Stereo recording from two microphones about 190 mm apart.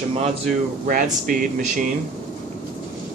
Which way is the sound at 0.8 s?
45° right (ahead or behind).